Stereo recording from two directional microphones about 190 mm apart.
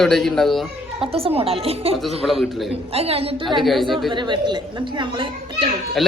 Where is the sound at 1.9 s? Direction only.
Centre (ahead or behind).